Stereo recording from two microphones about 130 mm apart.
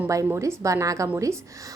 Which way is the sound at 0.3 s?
20° right (ahead or behind).